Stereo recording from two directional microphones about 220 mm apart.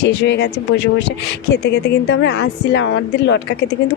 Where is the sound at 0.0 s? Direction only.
50° left (ahead or behind).